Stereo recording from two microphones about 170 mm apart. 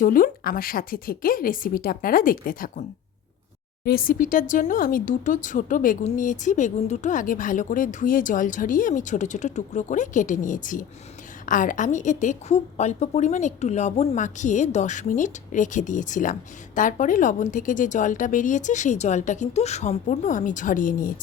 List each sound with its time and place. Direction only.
0.0 s a woman's voice: 55° left (ahead or behind)
3.8 s a woman's voice: 60° left (ahead or behind)